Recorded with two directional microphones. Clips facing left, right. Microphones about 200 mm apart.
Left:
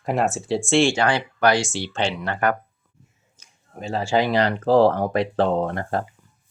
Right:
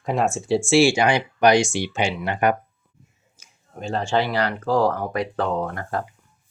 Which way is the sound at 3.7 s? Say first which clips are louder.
Left 1 dB; 5° left (ahead or behind).